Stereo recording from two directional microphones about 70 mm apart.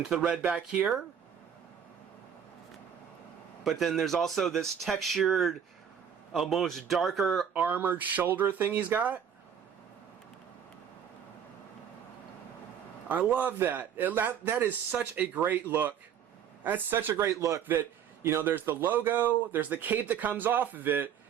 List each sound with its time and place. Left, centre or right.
0.2 s speech: centre
3.6 s speech: centre
7.5 s speech: right
13.1 s speech: right
17.2 s a man's voice: right
17.7 s speech: right